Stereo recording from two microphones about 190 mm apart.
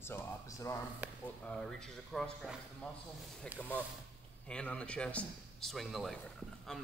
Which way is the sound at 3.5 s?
10° left (ahead or behind).